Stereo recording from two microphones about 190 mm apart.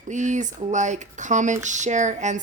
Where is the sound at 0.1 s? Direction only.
40° right (ahead or behind).